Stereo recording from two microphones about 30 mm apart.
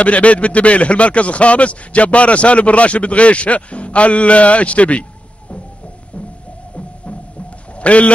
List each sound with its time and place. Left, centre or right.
0.0 s speech: left
7.8 s speech: left